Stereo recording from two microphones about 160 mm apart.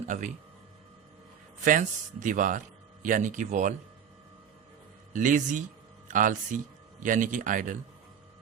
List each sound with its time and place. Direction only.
1.6 s speech: 55° right (ahead or behind)
5.1 s speech: 55° right (ahead or behind)